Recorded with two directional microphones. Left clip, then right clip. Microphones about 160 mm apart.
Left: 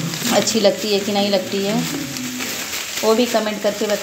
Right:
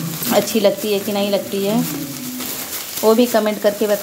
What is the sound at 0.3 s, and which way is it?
Speech, 15° right (ahead or behind).